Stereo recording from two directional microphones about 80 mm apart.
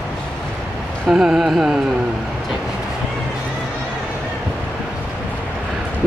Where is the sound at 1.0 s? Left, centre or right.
Centre.